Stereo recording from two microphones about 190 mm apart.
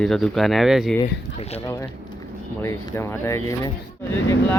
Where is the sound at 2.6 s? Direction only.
15° left (ahead or behind).